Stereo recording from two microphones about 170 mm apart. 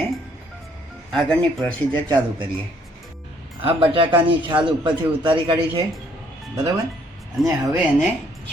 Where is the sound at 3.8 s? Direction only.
30° right (ahead or behind).